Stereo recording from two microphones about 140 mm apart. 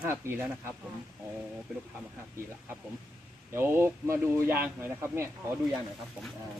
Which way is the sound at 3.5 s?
15° right (ahead or behind).